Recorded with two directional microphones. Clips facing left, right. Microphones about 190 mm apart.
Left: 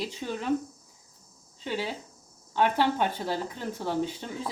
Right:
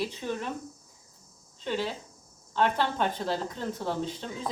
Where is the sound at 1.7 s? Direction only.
10° left (ahead or behind).